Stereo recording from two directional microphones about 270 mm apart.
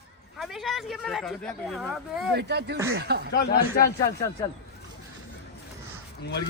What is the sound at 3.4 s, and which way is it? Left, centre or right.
Speech, left.